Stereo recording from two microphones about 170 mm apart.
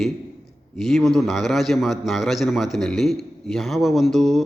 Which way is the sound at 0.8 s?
Centre (ahead or behind).